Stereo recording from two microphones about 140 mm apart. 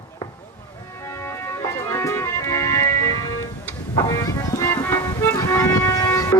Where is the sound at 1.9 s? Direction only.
20° left (ahead or behind).